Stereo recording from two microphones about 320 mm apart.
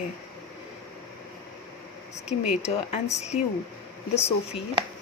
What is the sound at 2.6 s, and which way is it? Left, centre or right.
Speech, centre.